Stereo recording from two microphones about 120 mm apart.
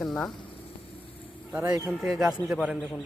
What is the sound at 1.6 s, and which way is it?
Speech, 30° right (ahead or behind).